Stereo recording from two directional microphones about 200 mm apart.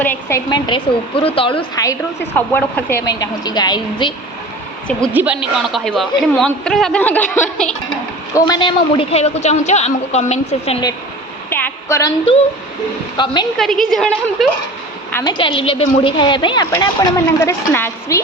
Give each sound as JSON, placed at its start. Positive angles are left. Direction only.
{"t": 0.0, "sound": "a woman's voice", "side_deg": 10}
{"t": 5.1, "sound": "a man's voice", "side_deg": -5}
{"t": 11.4, "sound": "a sound", "side_deg": 10}
{"t": 13.2, "sound": "a woman's voice", "side_deg": 20}
{"t": 13.6, "sound": "a man's voice", "side_deg": 0}
{"t": 15.1, "sound": "a woman's voice", "side_deg": 20}